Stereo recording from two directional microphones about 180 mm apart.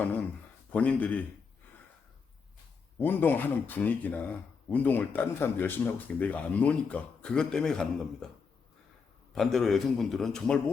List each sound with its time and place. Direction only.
0.7 s speech: 10° left (ahead or behind)
3.0 s speech: 10° left (ahead or behind)
9.3 s a man's voice: centre (ahead or behind)